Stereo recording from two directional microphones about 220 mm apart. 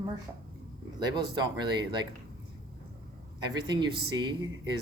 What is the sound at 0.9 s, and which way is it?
Speech, 20° right (ahead or behind).